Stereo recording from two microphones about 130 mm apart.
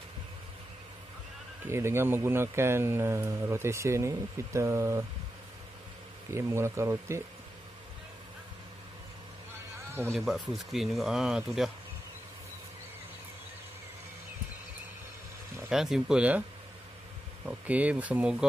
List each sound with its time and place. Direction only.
1.7 s speech: 20° right (ahead or behind)
6.3 s speech: 20° right (ahead or behind)
10.1 s speech: centre (ahead or behind)
15.7 s speech: 5° right (ahead or behind)
17.5 s speech: 10° right (ahead or behind)